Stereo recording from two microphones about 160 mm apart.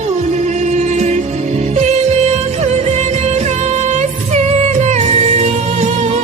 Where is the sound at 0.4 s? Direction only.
45° right (ahead or behind).